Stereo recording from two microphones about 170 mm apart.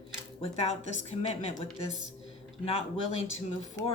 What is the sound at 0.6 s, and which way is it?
Speech, 40° left (ahead or behind).